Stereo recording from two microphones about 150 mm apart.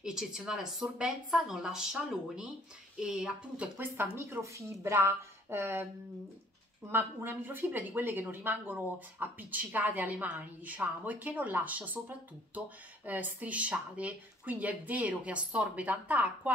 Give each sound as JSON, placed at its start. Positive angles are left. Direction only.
{"t": 0.0, "sound": "speech", "side_deg": -5}
{"t": 6.9, "sound": "speech", "side_deg": -15}